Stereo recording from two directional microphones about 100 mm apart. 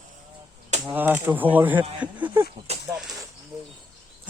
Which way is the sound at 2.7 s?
90° right.